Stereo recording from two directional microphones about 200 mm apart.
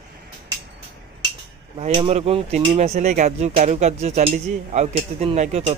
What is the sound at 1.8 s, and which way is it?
Speech, 30° right (ahead or behind).